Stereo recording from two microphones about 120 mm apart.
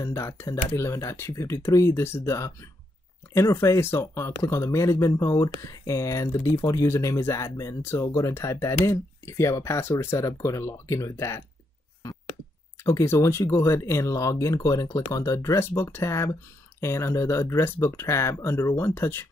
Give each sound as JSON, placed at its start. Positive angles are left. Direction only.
{"t": 0.0, "sound": "speech", "side_deg": 25}
{"t": 12.8, "sound": "speech", "side_deg": 25}